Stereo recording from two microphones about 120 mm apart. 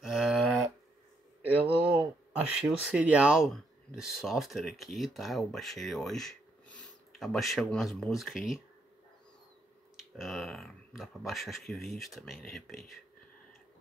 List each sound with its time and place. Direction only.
0.0 s cattle: 5° right (ahead or behind)
1.4 s a sound: 15° right (ahead or behind)
2.8 s speech: 10° right (ahead or behind)
10.1 s speech: centre (ahead or behind)